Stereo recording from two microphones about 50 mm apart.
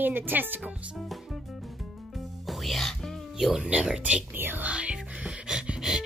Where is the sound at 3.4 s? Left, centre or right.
Centre.